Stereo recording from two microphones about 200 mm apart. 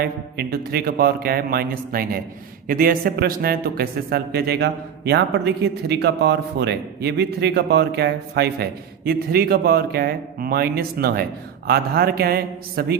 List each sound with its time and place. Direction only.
0.0 s a man's voice: 50° right (ahead or behind)